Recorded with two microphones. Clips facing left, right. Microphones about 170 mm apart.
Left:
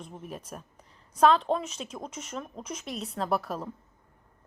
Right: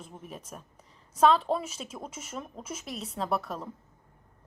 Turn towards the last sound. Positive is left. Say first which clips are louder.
# left 2 dB
turn(degrees=0)  # may be behind; listen again after turning